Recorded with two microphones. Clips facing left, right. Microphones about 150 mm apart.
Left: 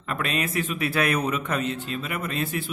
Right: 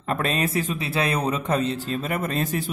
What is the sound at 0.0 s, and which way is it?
Speech, 35° right (ahead or behind).